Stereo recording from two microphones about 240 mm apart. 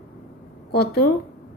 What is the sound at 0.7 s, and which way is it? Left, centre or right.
Speech, left.